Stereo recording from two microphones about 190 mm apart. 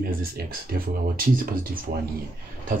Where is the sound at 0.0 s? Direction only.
50° right (ahead or behind).